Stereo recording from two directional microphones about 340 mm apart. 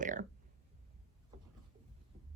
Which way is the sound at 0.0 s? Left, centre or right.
Right.